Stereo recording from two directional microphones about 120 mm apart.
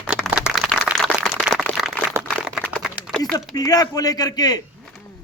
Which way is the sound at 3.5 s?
30° left (ahead or behind).